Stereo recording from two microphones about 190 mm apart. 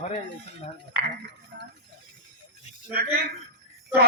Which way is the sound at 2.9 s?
55° right (ahead or behind).